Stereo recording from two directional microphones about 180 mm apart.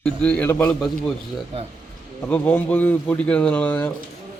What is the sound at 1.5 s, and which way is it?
Speech, 30° right (ahead or behind).